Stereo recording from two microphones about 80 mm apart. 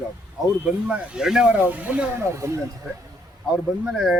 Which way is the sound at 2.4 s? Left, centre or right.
Right.